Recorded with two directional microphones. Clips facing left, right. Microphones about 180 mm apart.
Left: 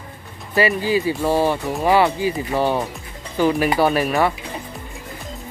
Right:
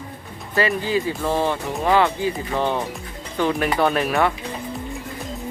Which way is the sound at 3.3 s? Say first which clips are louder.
Left 3 dB; 5° left (ahead or behind).